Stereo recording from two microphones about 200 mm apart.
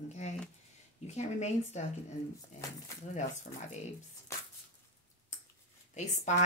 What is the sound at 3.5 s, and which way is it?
Speech, 45° left (ahead or behind).